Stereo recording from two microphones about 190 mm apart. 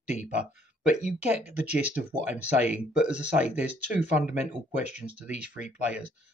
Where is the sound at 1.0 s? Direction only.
5° right (ahead or behind).